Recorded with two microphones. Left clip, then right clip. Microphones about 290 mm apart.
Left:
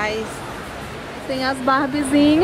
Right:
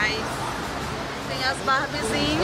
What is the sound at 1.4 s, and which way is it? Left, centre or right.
Speech, centre.